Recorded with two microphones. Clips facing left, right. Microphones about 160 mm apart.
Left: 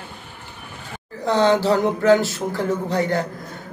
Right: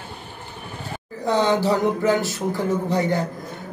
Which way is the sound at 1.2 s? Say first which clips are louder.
Left 2 dB; 15° right (ahead or behind).